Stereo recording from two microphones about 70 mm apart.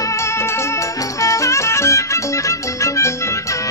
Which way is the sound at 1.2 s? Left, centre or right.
Left.